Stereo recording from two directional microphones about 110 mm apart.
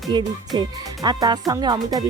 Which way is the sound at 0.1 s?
45° right (ahead or behind).